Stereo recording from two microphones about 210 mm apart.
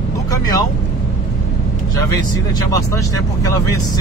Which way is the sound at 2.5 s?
15° left (ahead or behind).